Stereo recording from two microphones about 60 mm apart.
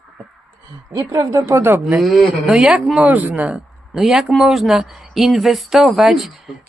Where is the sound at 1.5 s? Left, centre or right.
Right.